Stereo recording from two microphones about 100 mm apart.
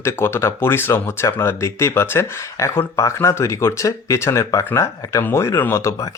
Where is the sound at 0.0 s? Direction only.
25° left (ahead or behind).